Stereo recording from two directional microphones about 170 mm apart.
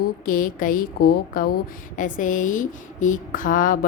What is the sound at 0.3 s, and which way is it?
A woman's voice, 55° left (ahead or behind).